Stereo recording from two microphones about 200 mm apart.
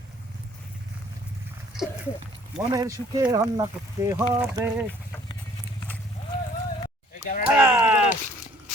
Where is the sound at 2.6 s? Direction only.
15° right (ahead or behind).